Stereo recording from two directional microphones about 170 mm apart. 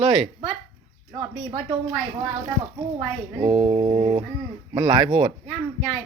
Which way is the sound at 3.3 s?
30° right (ahead or behind).